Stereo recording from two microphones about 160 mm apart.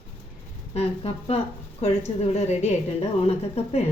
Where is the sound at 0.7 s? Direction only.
40° left (ahead or behind).